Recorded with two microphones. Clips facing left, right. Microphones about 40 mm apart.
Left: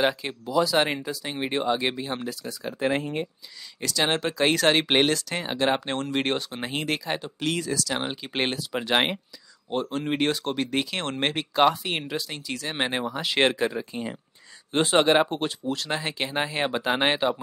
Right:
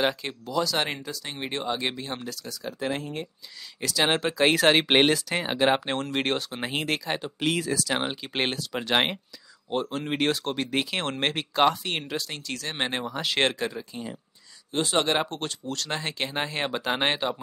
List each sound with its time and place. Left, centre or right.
0.0 s speech: centre; by 3.3 s left
3.8 s speech: centre
8.2 s speech: centre
14.7 s speech: left
15.0 s speech: centre